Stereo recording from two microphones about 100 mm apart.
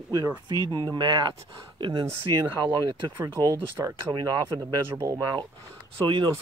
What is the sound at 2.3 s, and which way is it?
Speech, 45° right (ahead or behind).